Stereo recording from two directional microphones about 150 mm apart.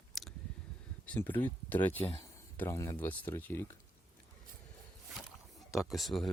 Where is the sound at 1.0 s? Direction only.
10° left (ahead or behind).